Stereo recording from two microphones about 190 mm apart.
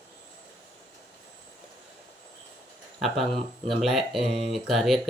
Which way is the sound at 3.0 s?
Centre (ahead or behind).